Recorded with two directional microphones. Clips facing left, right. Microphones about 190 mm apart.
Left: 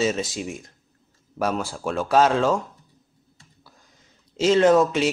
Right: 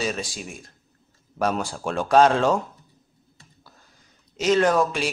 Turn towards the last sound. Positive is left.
turn(degrees=20)  # may be behind; listen again after turning